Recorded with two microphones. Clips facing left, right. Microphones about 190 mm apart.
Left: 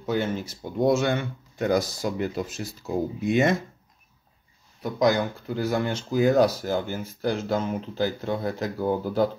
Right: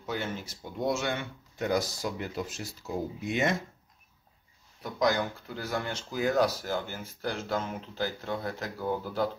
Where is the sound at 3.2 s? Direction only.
55° left (ahead or behind).